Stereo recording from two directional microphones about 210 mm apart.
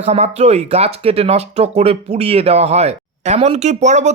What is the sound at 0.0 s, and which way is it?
Speech, 30° right (ahead or behind).